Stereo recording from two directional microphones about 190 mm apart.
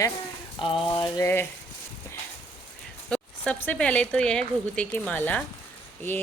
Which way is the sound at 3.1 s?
5° left (ahead or behind).